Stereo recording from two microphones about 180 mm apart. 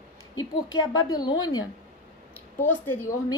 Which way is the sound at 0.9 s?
20° left (ahead or behind).